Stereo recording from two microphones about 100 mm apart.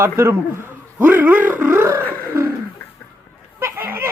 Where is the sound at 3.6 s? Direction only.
20° right (ahead or behind).